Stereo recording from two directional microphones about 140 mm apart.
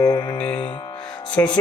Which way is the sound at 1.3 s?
5° left (ahead or behind).